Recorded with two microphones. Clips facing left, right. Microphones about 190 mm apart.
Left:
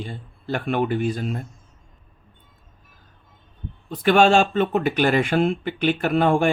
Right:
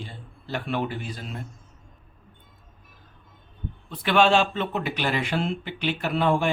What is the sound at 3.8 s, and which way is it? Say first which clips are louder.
Speech: left 4 dB; 45° left (ahead or behind).